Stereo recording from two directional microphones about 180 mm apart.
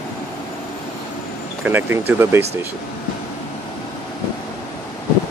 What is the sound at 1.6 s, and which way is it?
Speech, 10° right (ahead or behind).